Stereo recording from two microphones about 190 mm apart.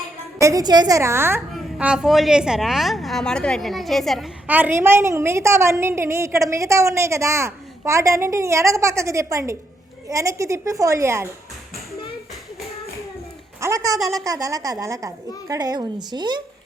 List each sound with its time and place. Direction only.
0.3 s a woman's voice: 15° right (ahead or behind)
13.6 s a woman's voice: 15° right (ahead or behind)
14.0 s speech: centre (ahead or behind)
14.3 s a woman's voice: 20° right (ahead or behind)